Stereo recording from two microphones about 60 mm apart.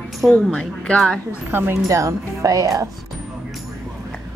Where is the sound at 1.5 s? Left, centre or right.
Right.